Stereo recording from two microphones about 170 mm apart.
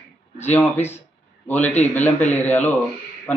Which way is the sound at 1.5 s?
10° left (ahead or behind).